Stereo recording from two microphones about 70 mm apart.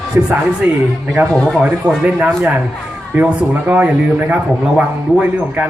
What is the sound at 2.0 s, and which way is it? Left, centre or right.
A man's voice, centre.